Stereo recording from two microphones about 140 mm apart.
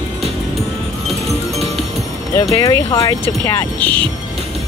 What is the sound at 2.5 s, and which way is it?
Speech, 25° left (ahead or behind).